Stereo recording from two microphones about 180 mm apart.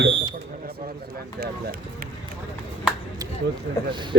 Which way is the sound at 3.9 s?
25° right (ahead or behind).